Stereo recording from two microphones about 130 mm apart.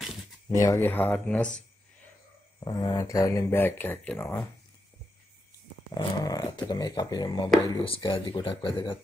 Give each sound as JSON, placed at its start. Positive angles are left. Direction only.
{"t": 0.5, "sound": "speech", "side_deg": 25}
{"t": 2.6, "sound": "speech", "side_deg": 30}
{"t": 5.9, "sound": "speech", "side_deg": 30}